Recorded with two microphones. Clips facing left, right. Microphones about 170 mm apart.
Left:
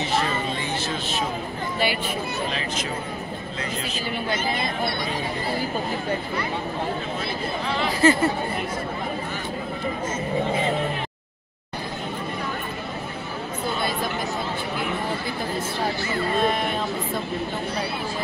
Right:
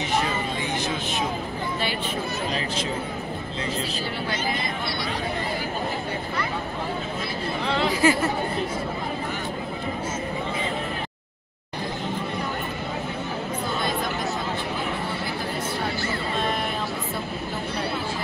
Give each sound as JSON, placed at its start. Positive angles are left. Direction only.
{"t": 0.8, "sound": "vehicle", "side_deg": -15}
{"t": 8.0, "sound": "speech", "side_deg": -10}